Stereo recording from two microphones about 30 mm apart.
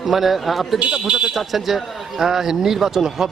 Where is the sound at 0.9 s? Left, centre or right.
Right.